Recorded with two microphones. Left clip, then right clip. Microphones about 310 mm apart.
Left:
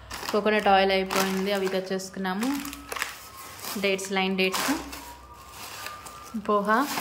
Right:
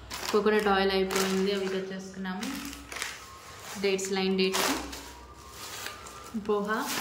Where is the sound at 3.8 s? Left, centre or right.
Centre.